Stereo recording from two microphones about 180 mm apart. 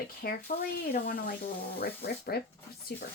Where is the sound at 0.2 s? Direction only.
55° left (ahead or behind).